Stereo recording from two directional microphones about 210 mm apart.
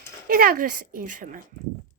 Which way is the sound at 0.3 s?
45° right (ahead or behind).